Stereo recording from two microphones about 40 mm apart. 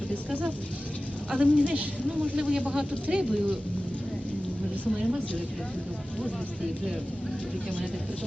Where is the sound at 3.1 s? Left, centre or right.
Right.